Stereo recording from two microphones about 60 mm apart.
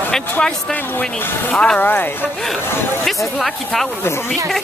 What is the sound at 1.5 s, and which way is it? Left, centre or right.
Speech, centre.